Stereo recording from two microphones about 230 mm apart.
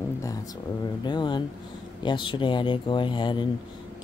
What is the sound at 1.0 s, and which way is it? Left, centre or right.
Speech, centre.